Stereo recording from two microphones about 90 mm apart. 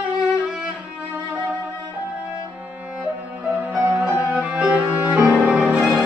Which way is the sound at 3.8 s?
15° right (ahead or behind).